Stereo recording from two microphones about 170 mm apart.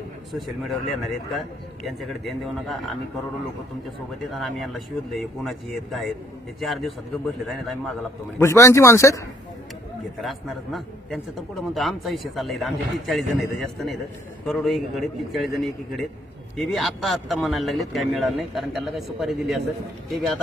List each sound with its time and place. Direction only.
0.3 s a man's voice: centre (ahead or behind)
4.3 s a man's voice: centre (ahead or behind)
8.4 s speech: 15° left (ahead or behind)
10.2 s a man's voice: centre (ahead or behind)